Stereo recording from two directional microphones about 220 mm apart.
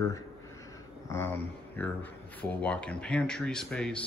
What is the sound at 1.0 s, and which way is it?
Speech, 10° left (ahead or behind).